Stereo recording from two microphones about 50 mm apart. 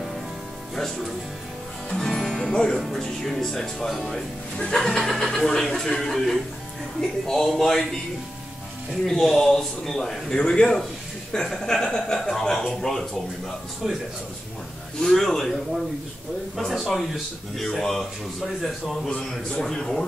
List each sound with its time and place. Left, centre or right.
0.7 s speech: centre
2.0 s music: centre
2.8 s speech: centre
4.6 s a man's voice: centre
4.8 s a man's voice: centre
9.0 s a man's voice: centre
13.8 s speech: centre
15.0 s a man's voice: centre
17.6 s speech: centre
19.0 s a man's voice: centre